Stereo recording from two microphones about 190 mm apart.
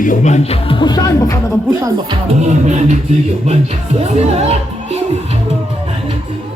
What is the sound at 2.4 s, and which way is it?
Speech, 35° right (ahead or behind).